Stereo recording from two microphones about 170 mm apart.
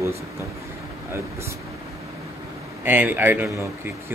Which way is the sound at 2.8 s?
10° right (ahead or behind).